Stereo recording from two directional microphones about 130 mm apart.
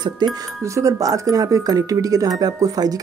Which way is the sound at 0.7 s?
25° right (ahead or behind).